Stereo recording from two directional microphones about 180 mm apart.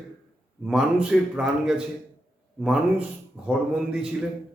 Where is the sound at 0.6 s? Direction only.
5° right (ahead or behind).